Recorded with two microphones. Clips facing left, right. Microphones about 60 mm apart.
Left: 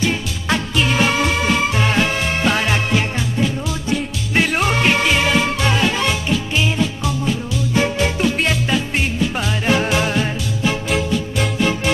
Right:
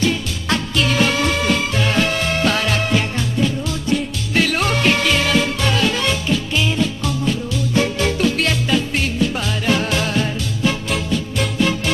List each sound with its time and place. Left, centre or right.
0.0 s music: centre
4.3 s music: left
10.6 s music: centre